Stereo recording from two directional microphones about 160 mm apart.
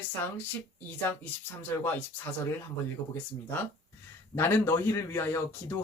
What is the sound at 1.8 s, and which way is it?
Speech, 15° left (ahead or behind).